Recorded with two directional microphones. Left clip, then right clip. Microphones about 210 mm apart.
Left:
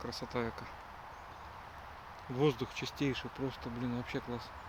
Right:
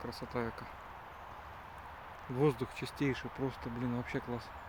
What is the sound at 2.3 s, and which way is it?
Speech, 10° right (ahead or behind).